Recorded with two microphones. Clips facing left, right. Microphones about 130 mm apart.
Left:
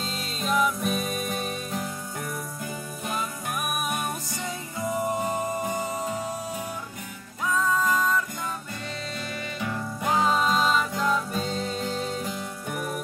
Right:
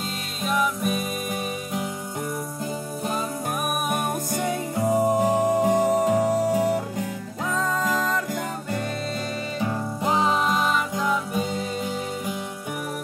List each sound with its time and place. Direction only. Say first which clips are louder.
0.4 s music: right 1 dB; 5° right (ahead or behind)
3.9 s music: right 5 dB; 55° right (ahead or behind); by 8.3 s 80° right
9.6 s music: right 4 dB; 30° right (ahead or behind); by 12.4 s 10° right (ahead or behind)